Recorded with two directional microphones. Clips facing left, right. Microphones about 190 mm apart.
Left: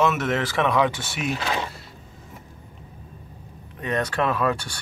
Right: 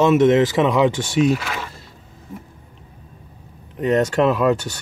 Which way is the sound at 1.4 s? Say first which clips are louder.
Left 2 dB; 20° left (ahead or behind).